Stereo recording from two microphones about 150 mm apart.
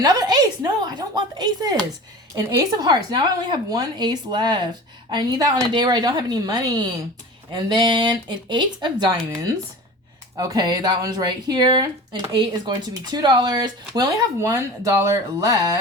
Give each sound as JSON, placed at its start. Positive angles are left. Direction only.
{"t": 0.0, "sound": "a sound", "side_deg": -25}
{"t": 2.6, "sound": "speech", "side_deg": -30}
{"t": 10.3, "sound": "speech", "side_deg": -25}